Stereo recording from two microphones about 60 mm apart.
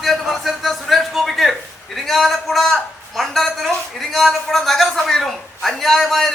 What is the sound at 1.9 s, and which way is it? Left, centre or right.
A woman's voice, centre.